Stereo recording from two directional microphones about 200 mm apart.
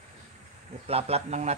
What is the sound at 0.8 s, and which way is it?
Speech, 30° right (ahead or behind).